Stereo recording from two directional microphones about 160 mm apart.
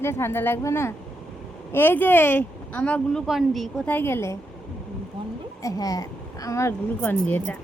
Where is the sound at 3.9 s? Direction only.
15° left (ahead or behind).